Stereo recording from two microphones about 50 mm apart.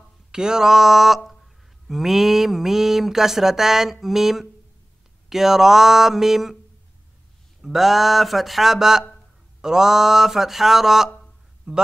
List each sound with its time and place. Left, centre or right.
0.3 s mantra: centre
7.6 s mantra: centre
11.7 s speech: centre